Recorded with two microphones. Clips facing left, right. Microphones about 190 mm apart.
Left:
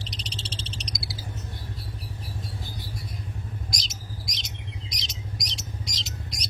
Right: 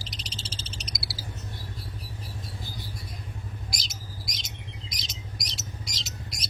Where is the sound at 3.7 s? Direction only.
Centre (ahead or behind).